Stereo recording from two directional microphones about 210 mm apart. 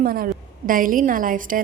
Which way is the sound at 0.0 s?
45° right (ahead or behind).